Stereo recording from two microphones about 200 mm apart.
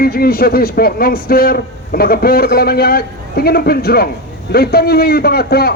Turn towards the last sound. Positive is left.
turn(degrees=50)  # may be behind; listen again after turning